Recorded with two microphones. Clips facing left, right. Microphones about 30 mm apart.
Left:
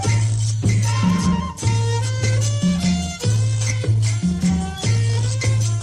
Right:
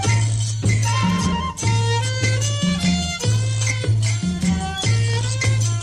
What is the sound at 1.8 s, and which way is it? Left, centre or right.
Music, right.